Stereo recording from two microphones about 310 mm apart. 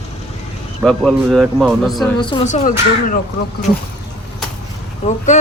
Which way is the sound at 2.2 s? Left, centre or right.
Centre.